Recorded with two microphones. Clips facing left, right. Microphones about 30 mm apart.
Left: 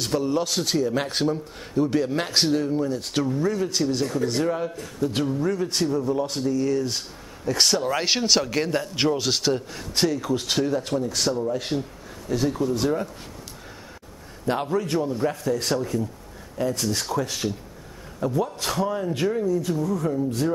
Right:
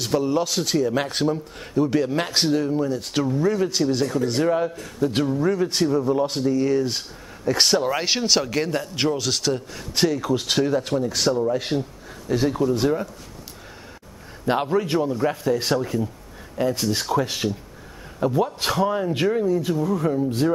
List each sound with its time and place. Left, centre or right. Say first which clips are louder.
0.0 s speech: right 2 dB; centre
7.9 s speech: even; centre
9.9 s speech: right 2 dB; centre
14.4 s speech: right 3 dB; right